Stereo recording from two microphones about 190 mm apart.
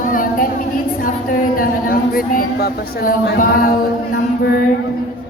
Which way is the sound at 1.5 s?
50° left (ahead or behind).